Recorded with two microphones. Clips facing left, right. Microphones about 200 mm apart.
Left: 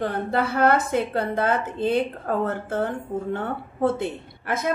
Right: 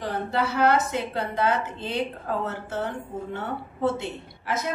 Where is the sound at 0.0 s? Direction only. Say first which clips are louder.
Left 3 dB; 55° left (ahead or behind).